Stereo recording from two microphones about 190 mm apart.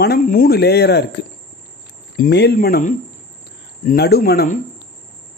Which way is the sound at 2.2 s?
60° left (ahead or behind).